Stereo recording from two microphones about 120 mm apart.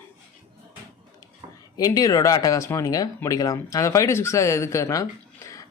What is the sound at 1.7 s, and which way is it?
Speech, 35° left (ahead or behind).